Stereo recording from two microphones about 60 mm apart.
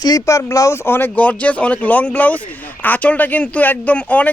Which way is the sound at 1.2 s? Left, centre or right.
Left.